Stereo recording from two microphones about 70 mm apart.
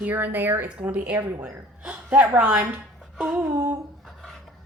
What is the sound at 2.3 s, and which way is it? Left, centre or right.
Speech, right.